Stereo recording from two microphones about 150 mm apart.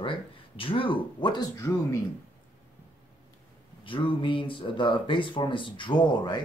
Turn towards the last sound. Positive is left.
turn(degrees=30)  # may be behind; listen again after turning